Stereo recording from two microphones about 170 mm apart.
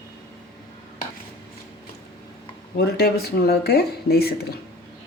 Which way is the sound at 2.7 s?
70° left (ahead or behind).